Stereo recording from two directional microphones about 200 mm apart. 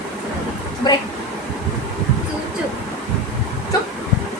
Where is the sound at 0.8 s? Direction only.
20° left (ahead or behind).